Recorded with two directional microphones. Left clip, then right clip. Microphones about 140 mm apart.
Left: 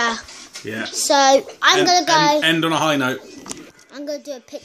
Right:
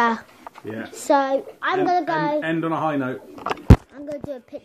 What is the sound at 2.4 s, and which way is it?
Speech, 55° left (ahead or behind).